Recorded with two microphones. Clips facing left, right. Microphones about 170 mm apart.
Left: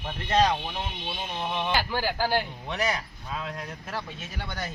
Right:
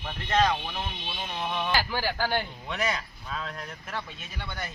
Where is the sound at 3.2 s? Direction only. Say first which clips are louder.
Left 2 dB; 15° left (ahead or behind).